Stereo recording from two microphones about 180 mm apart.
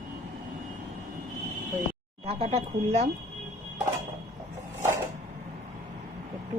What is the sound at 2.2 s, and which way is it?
Speech, 35° right (ahead or behind).